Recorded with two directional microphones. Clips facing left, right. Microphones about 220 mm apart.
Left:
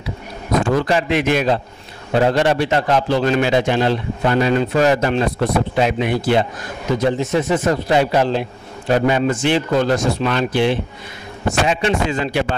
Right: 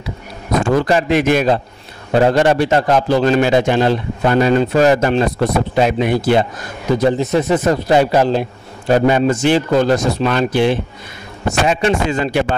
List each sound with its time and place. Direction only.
0.6 s a man's voice: 45° right (ahead or behind)